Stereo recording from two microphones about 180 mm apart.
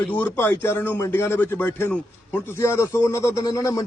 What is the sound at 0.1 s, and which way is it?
Speech, 10° left (ahead or behind).